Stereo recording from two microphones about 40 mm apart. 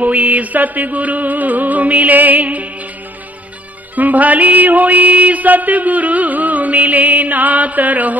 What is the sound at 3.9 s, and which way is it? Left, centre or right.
Music, right.